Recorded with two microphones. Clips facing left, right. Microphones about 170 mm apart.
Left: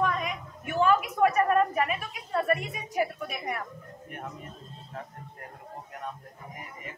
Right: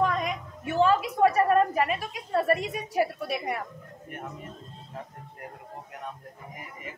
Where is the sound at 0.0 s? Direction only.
35° right (ahead or behind).